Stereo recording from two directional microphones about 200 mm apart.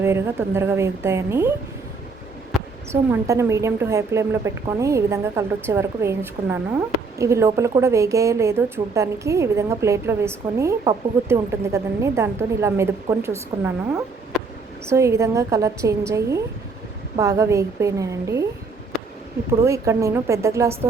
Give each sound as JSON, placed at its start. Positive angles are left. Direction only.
{"t": 0.0, "sound": "a woman's voice", "side_deg": -10}
{"t": 2.9, "sound": "a woman's voice", "side_deg": -15}
{"t": 19.5, "sound": "a woman's voice", "side_deg": -15}